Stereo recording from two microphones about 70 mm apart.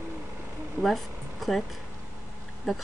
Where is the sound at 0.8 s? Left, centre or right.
Centre.